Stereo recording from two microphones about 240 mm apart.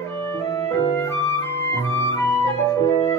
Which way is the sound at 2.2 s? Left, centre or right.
Centre.